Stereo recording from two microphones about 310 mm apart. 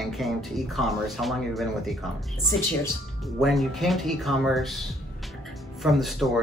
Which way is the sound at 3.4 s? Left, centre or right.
Centre.